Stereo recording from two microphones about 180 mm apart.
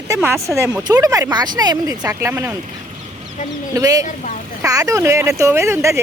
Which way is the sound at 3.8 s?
20° right (ahead or behind).